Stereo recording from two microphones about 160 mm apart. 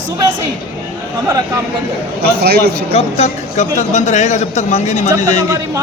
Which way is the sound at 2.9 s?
40° left (ahead or behind).